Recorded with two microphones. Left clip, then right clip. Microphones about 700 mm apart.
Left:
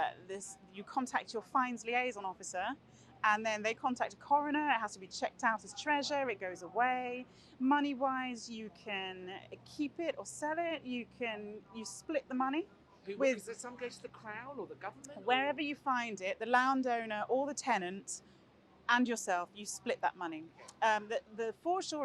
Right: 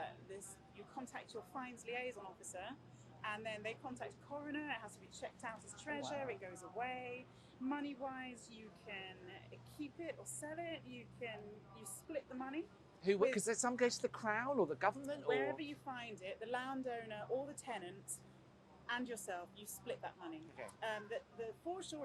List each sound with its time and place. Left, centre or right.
0.0 s a sound: left
1.0 s a woman's voice: left
13.3 s speech: right
15.3 s a woman's voice: left
18.9 s a woman's voice: left